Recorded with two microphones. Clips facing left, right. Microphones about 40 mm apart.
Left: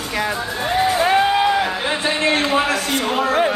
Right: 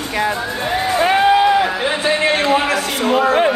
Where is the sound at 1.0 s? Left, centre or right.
Centre.